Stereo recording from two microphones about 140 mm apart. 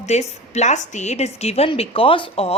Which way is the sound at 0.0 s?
55° left (ahead or behind).